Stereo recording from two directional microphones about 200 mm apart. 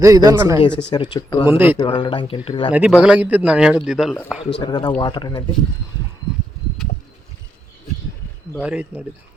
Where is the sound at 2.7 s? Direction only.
5° right (ahead or behind).